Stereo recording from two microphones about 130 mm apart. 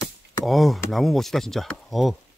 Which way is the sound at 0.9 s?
Centre (ahead or behind).